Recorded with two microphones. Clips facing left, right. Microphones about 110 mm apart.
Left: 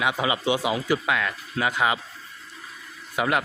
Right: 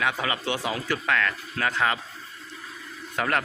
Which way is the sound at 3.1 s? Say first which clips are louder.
Left 2 dB; 10° left (ahead or behind).